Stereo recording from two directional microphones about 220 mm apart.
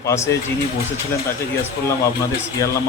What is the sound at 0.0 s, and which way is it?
Speech, 15° left (ahead or behind).